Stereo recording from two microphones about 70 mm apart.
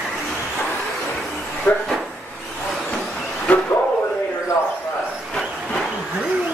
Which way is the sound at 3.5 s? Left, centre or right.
Centre.